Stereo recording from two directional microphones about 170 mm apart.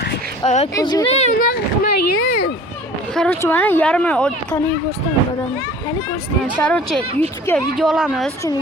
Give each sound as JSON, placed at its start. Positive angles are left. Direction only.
{"t": 0.4, "sound": "speech", "side_deg": 45}
{"t": 0.7, "sound": "speech", "side_deg": 20}
{"t": 1.0, "sound": "speech", "side_deg": 35}
{"t": 1.3, "sound": "a child's voice", "side_deg": 60}
{"t": 3.2, "sound": "speech", "side_deg": 10}
{"t": 6.6, "sound": "speech", "side_deg": 5}